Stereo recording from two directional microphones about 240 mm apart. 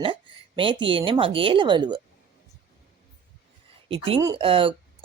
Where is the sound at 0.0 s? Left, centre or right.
Right.